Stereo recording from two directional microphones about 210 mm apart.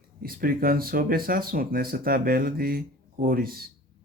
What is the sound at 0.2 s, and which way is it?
Speech, 45° right (ahead or behind).